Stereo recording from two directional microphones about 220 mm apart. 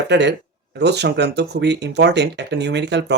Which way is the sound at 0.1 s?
50° right (ahead or behind).